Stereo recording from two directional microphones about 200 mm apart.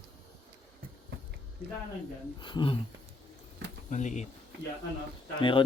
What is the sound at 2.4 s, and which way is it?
Speech, 25° left (ahead or behind).